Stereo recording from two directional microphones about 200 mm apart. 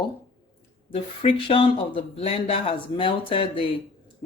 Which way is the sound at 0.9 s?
25° left (ahead or behind).